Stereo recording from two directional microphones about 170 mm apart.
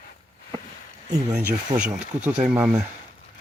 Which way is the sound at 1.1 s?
20° right (ahead or behind).